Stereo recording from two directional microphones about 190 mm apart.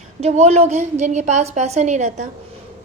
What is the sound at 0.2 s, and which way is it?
A woman's voice, 35° right (ahead or behind).